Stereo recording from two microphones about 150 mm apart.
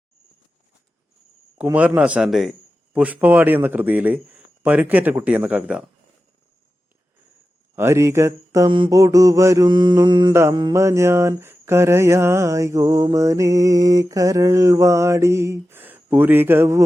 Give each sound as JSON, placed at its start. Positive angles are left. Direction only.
{"t": 2.0, "sound": "a man's voice", "side_deg": -10}
{"t": 7.8, "sound": "mantra", "side_deg": -20}